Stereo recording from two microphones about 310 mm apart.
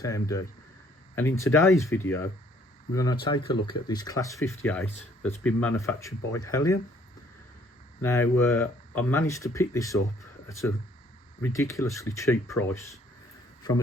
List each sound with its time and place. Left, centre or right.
0.0 s speech: centre
1.5 s speech: centre
8.0 s speech: centre
11.4 s speech: centre